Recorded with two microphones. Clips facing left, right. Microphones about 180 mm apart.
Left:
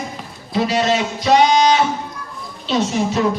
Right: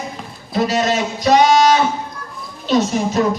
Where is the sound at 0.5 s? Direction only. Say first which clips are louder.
Even; 45° right (ahead or behind).